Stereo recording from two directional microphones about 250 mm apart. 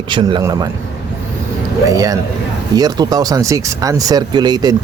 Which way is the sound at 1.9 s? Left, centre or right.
Centre.